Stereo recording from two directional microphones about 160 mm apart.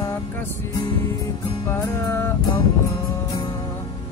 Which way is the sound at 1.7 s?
15° left (ahead or behind).